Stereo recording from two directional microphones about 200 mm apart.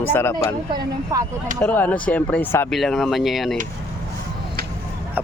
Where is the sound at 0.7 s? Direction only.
15° right (ahead or behind).